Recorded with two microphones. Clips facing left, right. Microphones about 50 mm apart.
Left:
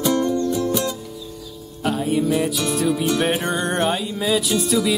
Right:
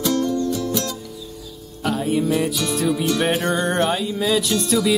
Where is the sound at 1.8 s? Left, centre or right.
Centre.